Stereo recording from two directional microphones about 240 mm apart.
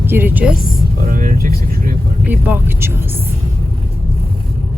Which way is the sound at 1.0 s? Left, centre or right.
Right.